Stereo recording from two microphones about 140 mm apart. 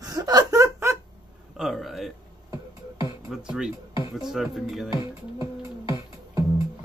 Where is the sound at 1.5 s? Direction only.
Centre (ahead or behind).